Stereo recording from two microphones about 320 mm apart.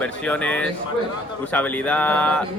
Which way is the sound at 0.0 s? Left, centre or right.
Centre.